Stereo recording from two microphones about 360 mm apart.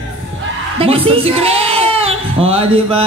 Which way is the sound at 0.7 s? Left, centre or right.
Centre.